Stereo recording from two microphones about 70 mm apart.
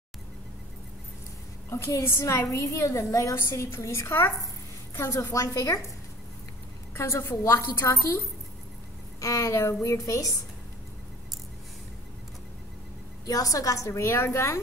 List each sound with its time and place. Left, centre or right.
1.7 s a woman's voice: left
5.3 s a woman's voice: left
6.9 s a woman's voice: left
9.2 s a woman's voice: left
13.3 s a woman's voice: left